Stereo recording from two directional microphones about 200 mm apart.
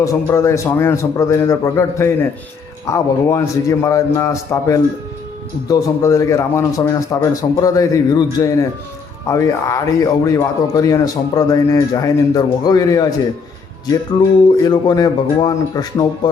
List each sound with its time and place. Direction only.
0.0 s speech: 15° left (ahead or behind)
14.6 s speech: 20° left (ahead or behind)